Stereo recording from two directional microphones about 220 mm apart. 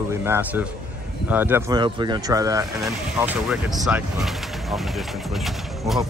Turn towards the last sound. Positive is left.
turn(degrees=0)  # may be behind; listen again after turning